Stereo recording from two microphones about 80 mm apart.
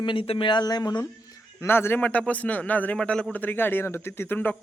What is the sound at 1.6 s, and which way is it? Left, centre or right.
A man's voice, left.